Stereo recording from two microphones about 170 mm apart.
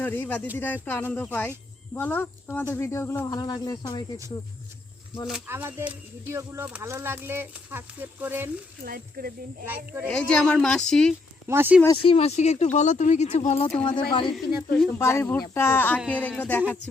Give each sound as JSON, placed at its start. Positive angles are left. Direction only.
{"t": 0.0, "sound": "speech", "side_deg": 10}
{"t": 5.5, "sound": "speech", "side_deg": -10}
{"t": 8.8, "sound": "speech", "side_deg": -60}
{"t": 9.6, "sound": "speech", "side_deg": -10}
{"t": 10.1, "sound": "speech", "side_deg": 5}
{"t": 11.4, "sound": "speech", "side_deg": -10}
{"t": 12.0, "sound": "speech", "side_deg": 35}
{"t": 14.1, "sound": "speech", "side_deg": 30}
{"t": 14.3, "sound": "speech", "side_deg": 5}